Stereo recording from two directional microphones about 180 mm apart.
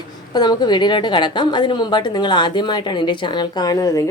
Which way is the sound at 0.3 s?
25° left (ahead or behind).